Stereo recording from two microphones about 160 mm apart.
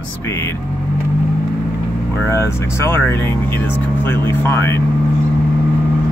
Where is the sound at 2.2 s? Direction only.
15° left (ahead or behind).